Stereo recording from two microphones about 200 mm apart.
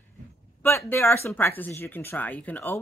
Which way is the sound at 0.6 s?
10° left (ahead or behind).